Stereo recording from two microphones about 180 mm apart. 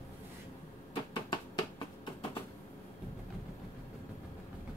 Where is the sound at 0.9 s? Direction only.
25° left (ahead or behind).